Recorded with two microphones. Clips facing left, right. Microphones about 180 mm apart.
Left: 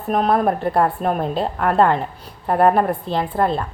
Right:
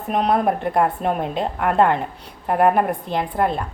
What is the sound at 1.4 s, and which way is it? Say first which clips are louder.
Speech: left 1 dB; 40° left (ahead or behind).